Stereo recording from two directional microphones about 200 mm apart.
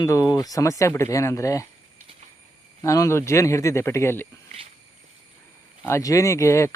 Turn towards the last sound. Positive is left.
turn(degrees=15)  # may be behind; listen again after turning